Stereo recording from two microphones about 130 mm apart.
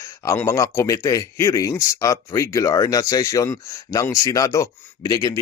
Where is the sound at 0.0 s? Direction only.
20° left (ahead or behind).